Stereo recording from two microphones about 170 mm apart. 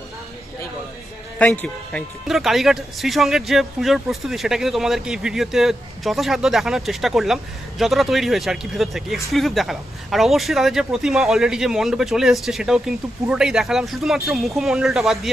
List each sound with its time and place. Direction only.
1.4 s speech: 5° left (ahead or behind)